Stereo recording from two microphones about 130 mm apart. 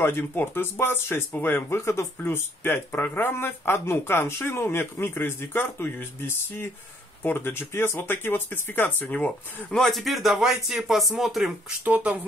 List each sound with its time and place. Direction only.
0.0 s speech: 15° left (ahead or behind); by 12.2 s 10° right (ahead or behind)